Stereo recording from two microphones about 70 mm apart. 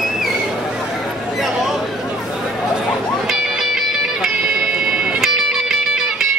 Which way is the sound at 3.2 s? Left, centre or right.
Centre.